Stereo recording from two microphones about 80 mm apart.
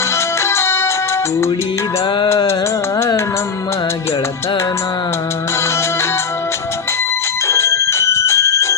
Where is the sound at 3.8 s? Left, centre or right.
Left.